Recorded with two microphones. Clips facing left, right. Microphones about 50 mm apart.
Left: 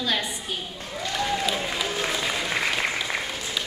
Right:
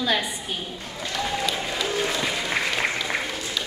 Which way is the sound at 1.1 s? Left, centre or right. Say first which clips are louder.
Even; centre.